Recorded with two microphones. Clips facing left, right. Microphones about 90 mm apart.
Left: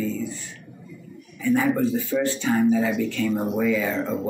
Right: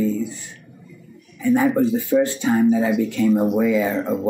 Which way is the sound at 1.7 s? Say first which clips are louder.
Right 5 dB; 20° right (ahead or behind).